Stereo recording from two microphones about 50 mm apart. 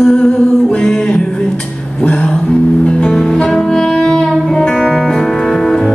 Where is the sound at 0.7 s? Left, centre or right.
Centre.